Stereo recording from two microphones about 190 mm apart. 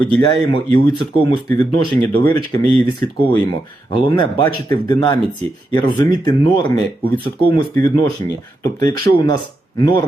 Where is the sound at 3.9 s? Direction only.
25° left (ahead or behind).